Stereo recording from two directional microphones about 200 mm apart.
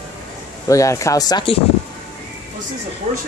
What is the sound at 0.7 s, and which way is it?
Speech, 15° left (ahead or behind).